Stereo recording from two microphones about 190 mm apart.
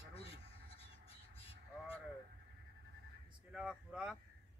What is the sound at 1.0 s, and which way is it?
Crow, 30° left (ahead or behind).